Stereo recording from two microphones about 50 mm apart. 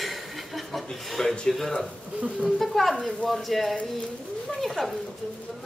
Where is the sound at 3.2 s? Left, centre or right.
Centre.